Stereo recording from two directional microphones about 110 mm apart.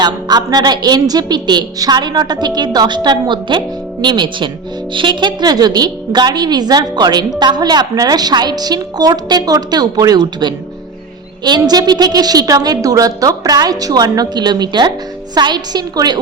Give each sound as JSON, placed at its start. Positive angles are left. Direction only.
{"t": 0.0, "sound": "a woman's voice", "side_deg": -40}